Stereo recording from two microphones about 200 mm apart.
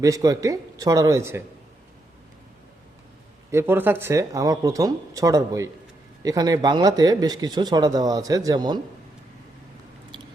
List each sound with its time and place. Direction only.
0.0 s speech: 15° right (ahead or behind)
3.5 s speech: 10° right (ahead or behind)